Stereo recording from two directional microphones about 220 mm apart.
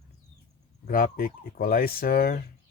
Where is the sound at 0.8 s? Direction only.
40° left (ahead or behind).